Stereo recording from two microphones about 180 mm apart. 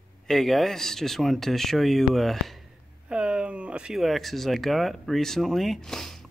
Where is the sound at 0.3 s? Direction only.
Centre (ahead or behind).